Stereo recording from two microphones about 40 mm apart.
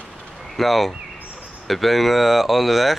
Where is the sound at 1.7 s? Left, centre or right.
Centre.